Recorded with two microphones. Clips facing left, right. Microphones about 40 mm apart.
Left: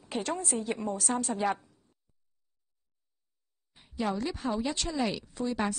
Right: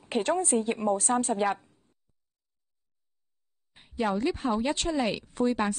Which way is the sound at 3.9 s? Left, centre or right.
Right.